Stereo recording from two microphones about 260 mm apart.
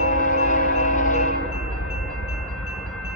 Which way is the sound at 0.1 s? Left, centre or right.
Left.